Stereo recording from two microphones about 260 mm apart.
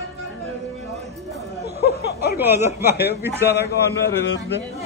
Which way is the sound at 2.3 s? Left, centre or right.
Centre.